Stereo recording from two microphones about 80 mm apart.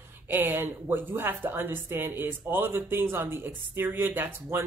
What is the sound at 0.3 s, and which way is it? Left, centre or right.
A woman's voice, right.